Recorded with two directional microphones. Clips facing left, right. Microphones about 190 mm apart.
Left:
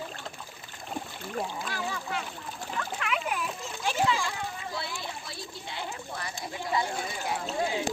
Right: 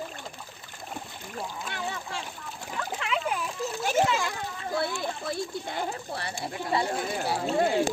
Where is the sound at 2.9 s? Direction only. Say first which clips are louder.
Right 3 dB; 30° right (ahead or behind).